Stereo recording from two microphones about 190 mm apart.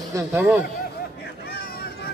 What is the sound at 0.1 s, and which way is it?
Speech, 10° right (ahead or behind).